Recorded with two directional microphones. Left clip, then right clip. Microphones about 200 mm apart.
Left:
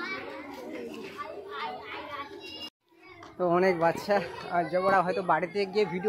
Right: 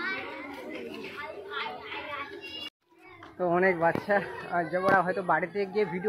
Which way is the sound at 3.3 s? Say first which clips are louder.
Even; 15° left (ahead or behind).